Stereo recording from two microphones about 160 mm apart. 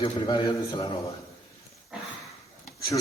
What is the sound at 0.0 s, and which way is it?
Speech, 35° left (ahead or behind).